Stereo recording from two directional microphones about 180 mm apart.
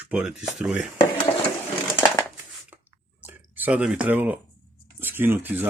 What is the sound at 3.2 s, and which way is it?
Speech, 10° right (ahead or behind).